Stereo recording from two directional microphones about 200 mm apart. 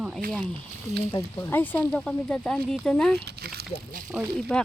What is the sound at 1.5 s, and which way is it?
Speech, 10° left (ahead or behind).